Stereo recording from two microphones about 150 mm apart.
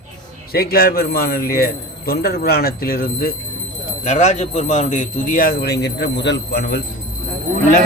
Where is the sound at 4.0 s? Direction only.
50° left (ahead or behind); by 6.8 s 90° left.